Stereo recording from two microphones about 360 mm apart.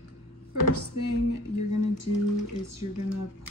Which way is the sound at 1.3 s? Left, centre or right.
Left.